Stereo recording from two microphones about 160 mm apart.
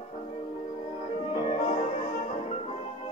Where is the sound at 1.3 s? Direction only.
40° left (ahead or behind).